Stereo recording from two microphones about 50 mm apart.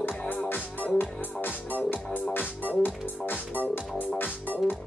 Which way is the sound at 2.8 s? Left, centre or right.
Left.